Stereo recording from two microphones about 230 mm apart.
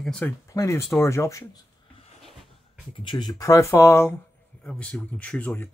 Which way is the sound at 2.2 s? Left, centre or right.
Centre.